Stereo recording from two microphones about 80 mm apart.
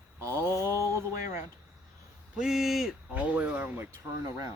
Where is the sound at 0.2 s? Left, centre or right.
Right.